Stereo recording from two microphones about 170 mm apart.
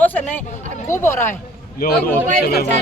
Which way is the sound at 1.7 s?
65° left (ahead or behind).